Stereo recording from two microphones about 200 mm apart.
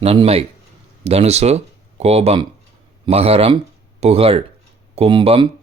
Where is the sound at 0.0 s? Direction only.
30° right (ahead or behind).